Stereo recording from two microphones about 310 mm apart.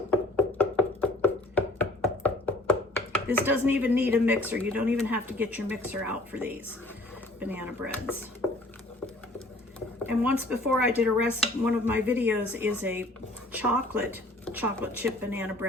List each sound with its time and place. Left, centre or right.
0.1 s music: centre
3.4 s speech: centre
10.0 s speech: centre